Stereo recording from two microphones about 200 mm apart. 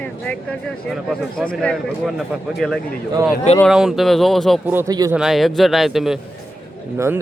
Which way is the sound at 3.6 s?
Centre (ahead or behind).